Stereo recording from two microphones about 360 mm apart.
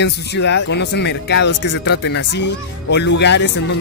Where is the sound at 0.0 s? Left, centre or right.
Left.